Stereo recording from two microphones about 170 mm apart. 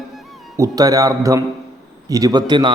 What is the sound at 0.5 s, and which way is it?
A man's voice, 20° right (ahead or behind).